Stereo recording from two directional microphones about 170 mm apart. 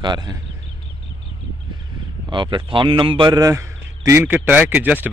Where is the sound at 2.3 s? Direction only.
30° right (ahead or behind); by 5.1 s 10° right (ahead or behind).